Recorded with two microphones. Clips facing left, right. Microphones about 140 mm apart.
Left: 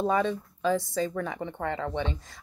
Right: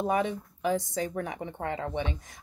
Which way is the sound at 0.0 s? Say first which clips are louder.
Left 2 dB; 15° right (ahead or behind).